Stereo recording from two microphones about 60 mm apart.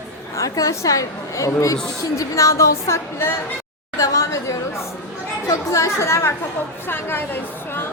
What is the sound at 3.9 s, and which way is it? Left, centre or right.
A woman's voice, left.